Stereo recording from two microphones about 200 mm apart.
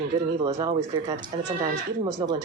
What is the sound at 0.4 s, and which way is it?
Speech, 25° right (ahead or behind).